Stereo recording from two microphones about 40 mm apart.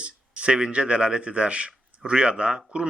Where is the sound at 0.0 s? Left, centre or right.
Right.